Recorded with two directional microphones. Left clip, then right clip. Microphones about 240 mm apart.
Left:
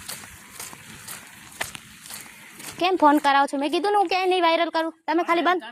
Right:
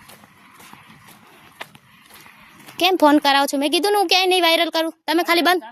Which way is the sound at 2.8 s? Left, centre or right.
Right.